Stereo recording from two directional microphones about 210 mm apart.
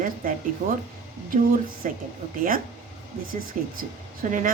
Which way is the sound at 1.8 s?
35° right (ahead or behind).